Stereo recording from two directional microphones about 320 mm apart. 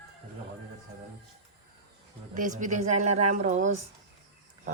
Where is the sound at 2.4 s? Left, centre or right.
Right.